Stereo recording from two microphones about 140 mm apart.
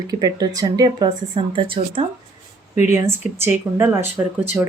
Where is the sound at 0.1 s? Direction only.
25° right (ahead or behind).